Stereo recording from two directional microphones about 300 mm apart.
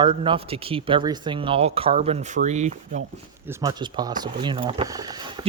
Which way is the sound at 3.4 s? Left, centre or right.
Centre.